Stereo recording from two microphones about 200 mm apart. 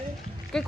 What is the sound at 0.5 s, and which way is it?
Speech, 5° left (ahead or behind).